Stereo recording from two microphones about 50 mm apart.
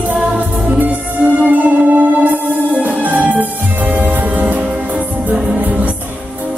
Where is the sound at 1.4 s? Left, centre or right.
Right.